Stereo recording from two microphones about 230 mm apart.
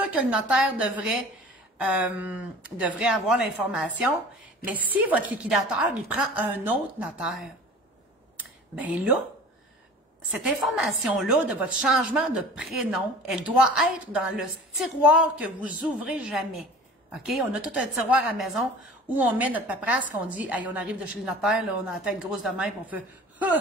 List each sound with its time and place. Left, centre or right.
0.0 s a woman's voice: centre
8.4 s a sound: centre
10.8 s a woman's voice: centre